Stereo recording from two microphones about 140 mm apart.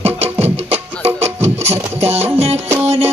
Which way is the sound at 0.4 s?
45° right (ahead or behind).